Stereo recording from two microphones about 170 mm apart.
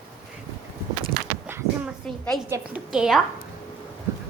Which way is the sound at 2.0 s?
5° left (ahead or behind).